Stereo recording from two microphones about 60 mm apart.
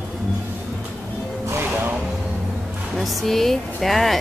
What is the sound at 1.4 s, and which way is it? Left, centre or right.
Music, right.